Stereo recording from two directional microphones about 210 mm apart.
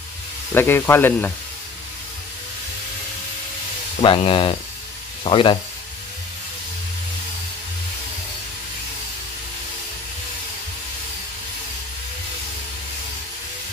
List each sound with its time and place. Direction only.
0.6 s speech: 10° left (ahead or behind)
4.0 s speech: 25° left (ahead or behind)